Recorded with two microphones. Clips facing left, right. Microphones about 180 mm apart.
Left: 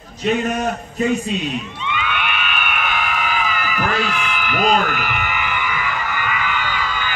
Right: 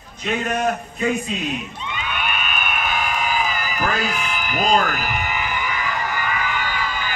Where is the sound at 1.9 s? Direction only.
40° right (ahead or behind).